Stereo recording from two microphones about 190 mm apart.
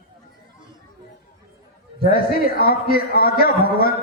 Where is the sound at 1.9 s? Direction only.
50° left (ahead or behind).